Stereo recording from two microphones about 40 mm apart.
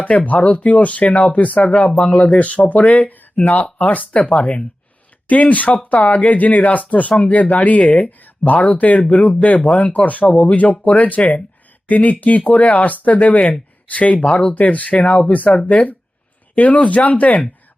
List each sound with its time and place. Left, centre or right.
0.3 s speech: left
1.6 s speech: left
4.1 s speech: left